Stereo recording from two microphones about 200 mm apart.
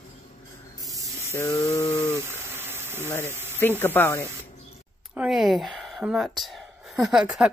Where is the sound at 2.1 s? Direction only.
10° right (ahead or behind).